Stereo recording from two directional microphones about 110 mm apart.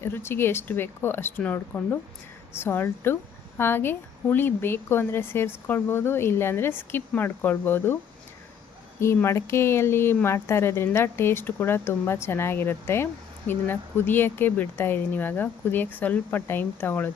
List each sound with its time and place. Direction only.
0.0 s a woman's voice: 20° left (ahead or behind)
9.2 s a woman's voice: 25° left (ahead or behind)